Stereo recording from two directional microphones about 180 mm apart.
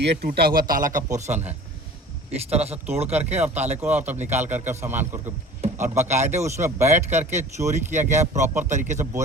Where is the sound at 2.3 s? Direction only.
35° right (ahead or behind).